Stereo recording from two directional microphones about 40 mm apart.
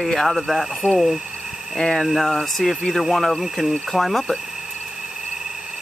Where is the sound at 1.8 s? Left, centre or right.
Centre.